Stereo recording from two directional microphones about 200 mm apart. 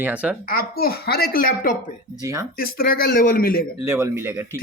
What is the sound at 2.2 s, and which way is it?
Speech, 15° right (ahead or behind).